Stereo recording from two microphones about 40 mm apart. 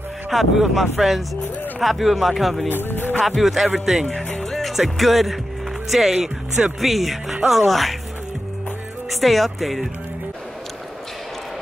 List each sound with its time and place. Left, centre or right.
0.3 s speech: centre
2.7 s music: left
3.3 s speech: centre
4.1 s music: centre
4.6 s music: centre
5.9 s speech: centre
9.1 s speech: centre